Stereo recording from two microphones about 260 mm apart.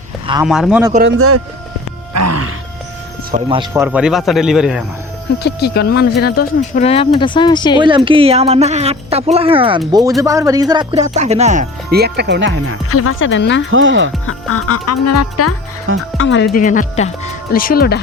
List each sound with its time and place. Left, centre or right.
0.4 s a man's voice: centre
2.1 s music: right
3.3 s speech: centre
3.8 s a man's voice: centre
5.4 s speech: left
6.8 s speech: left
7.8 s speech: centre; by 12.7 s right
12.9 s speech: left
13.7 s speech: right
14.3 s speech: left
16.1 s speech: left